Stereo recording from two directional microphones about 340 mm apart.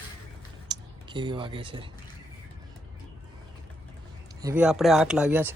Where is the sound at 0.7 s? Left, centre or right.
Centre.